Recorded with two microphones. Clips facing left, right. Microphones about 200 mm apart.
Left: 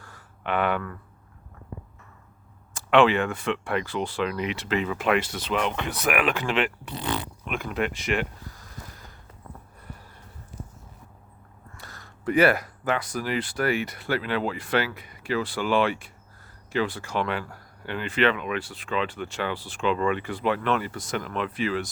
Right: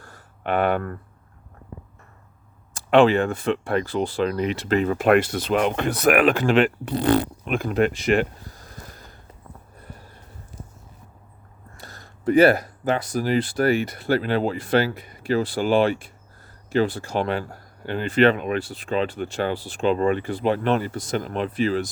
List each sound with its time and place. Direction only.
0.0 s a sound: 45° right (ahead or behind)
2.7 s speech: 40° right (ahead or behind)
11.8 s speech: 35° right (ahead or behind)